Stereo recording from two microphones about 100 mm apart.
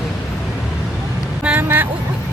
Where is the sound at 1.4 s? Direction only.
15° right (ahead or behind).